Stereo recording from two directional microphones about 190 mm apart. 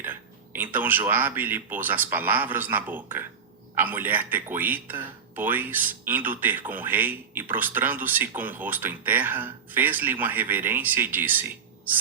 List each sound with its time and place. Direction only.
0.0 s speech: 10° right (ahead or behind)